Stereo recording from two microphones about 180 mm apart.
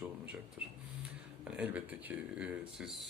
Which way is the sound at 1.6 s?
5° right (ahead or behind).